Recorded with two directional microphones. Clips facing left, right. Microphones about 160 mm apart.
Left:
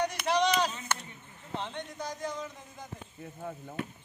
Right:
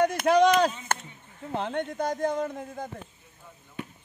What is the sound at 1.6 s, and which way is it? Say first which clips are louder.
A man's voice: right 10 dB; 55° right (ahead or behind).